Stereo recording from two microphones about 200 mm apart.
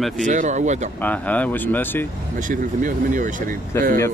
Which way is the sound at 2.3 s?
40° right (ahead or behind).